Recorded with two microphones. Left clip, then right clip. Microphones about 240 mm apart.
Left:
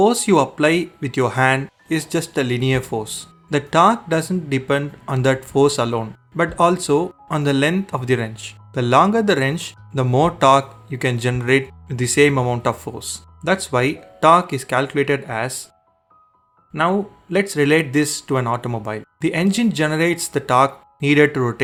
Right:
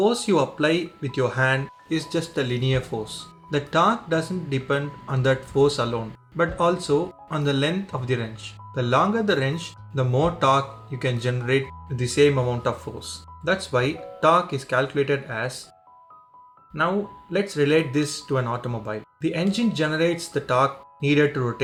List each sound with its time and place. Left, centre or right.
0.0 s speech: left
17.3 s speech: left